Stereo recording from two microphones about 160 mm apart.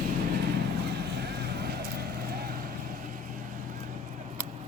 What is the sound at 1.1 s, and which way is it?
Vehicle, 90° right.